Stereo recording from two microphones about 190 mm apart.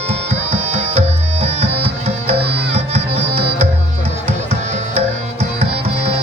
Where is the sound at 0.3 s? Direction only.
35° right (ahead or behind).